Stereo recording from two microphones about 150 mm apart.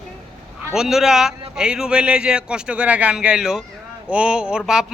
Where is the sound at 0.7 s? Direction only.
5° right (ahead or behind).